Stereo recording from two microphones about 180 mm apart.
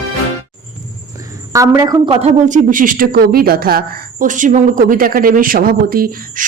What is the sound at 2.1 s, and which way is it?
Speech, 40° right (ahead or behind).